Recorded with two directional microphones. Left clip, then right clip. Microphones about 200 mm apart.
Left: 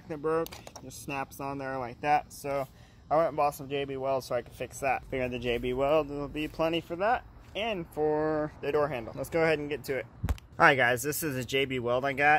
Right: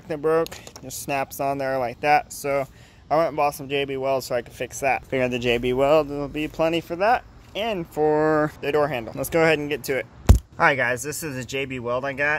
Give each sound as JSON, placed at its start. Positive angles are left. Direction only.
{"t": 0.1, "sound": "speech", "side_deg": -35}
{"t": 2.0, "sound": "a man's voice", "side_deg": -20}
{"t": 5.1, "sound": "speech", "side_deg": -30}
{"t": 8.5, "sound": "speech", "side_deg": -15}
{"t": 10.6, "sound": "speech", "side_deg": 20}